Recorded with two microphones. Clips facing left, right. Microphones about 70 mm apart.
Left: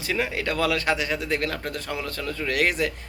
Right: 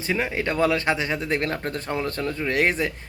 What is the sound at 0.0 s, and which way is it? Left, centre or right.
Speech, right.